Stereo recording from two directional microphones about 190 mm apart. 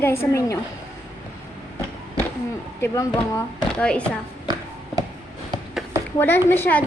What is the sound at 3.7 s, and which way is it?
Speech, 5° left (ahead or behind).